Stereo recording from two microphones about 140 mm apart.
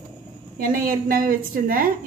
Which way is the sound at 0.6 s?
85° right.